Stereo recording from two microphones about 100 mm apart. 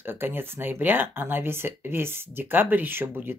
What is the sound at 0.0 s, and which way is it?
Speech, 20° right (ahead or behind).